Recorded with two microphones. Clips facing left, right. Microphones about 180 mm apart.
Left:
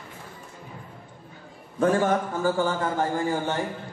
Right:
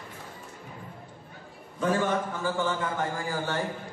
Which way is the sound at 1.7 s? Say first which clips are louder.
Left 5 dB; 45° left (ahead or behind).